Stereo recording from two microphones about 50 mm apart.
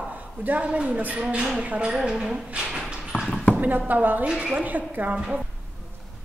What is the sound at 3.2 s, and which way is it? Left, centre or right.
Basketball bounce, centre.